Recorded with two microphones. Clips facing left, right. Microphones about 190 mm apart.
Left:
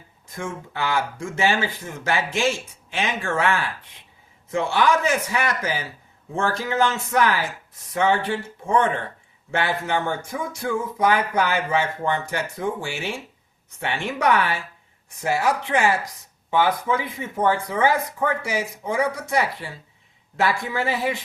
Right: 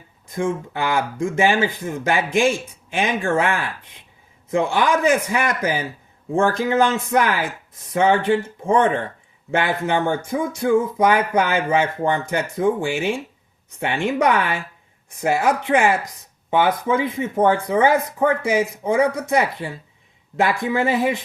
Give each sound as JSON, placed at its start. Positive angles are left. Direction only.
{"t": 0.3, "sound": "speech", "side_deg": -15}